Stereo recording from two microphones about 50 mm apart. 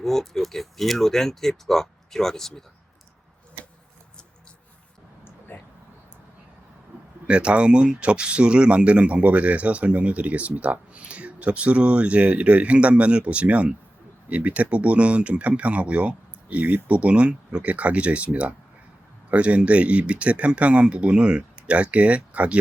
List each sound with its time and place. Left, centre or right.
0.0 s speech: centre
5.5 s a sound: left
7.3 s speech: right